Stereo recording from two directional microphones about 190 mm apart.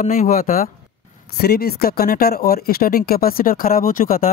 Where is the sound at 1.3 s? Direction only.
55° left (ahead or behind).